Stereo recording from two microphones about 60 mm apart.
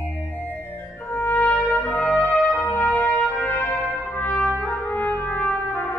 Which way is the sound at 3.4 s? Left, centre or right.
Left.